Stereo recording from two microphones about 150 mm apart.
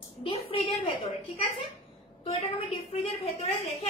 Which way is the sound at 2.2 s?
45° left (ahead or behind).